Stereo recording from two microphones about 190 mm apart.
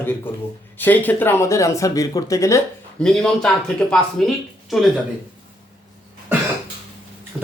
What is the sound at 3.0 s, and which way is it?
Speech, 5° left (ahead or behind).